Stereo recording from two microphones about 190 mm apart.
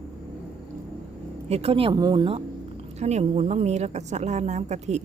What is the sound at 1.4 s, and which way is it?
Speech, 30° right (ahead or behind).